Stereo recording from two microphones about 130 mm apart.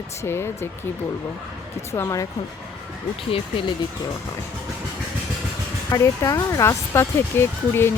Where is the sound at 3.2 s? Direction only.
45° left (ahead or behind).